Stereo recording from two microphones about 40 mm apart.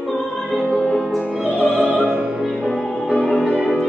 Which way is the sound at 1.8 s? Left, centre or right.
Right.